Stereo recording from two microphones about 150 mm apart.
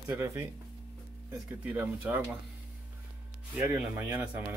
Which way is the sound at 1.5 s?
10° right (ahead or behind).